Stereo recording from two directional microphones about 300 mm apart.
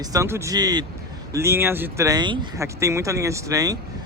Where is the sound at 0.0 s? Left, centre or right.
Centre.